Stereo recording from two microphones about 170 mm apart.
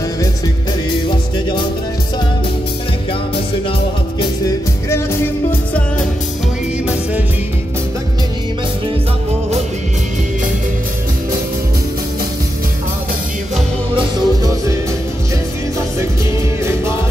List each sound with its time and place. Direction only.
4.2 s music: 20° left (ahead or behind)
13.9 s music: 25° right (ahead or behind)